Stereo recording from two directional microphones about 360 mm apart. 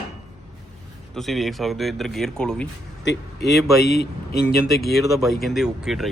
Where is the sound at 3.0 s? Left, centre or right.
Left.